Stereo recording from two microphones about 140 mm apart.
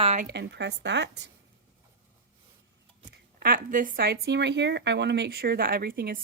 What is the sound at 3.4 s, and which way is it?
Speech, 75° right (ahead or behind).